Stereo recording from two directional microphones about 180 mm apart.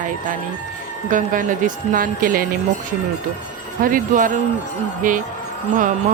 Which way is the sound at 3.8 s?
50° right (ahead or behind).